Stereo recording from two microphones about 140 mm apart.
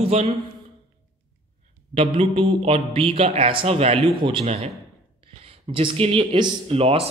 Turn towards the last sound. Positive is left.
turn(degrees=-45)  # may be behind; listen again after turning